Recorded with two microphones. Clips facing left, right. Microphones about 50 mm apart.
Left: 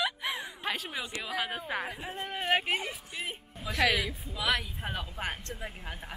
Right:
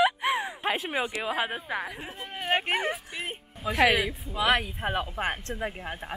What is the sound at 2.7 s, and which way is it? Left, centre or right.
Speech, right.